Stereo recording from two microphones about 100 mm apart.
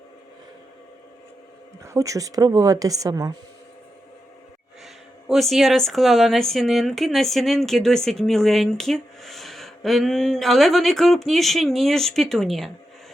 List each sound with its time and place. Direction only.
1.8 s speech: 30° right (ahead or behind)
5.3 s speech: centre (ahead or behind)